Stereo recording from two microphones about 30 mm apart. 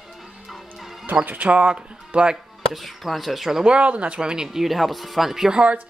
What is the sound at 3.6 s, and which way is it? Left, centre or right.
Speech, right.